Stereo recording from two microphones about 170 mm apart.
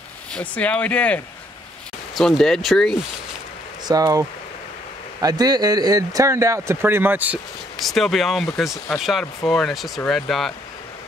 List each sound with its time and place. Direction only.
0.3 s speech: 10° left (ahead or behind)
3.8 s speech: 20° right (ahead or behind)
7.8 s speech: centre (ahead or behind)